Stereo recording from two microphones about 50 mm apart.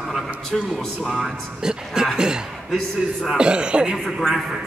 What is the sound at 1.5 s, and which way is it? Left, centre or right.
Speech, centre.